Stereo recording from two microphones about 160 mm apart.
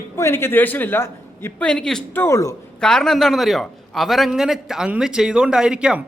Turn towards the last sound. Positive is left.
turn(degrees=-5)  # may be behind; listen again after turning